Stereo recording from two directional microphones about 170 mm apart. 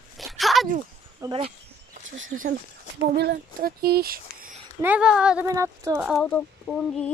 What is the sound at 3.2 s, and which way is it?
Speech, 65° right (ahead or behind).